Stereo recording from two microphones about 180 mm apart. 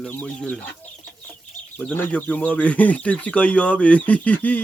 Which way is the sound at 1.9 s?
10° left (ahead or behind).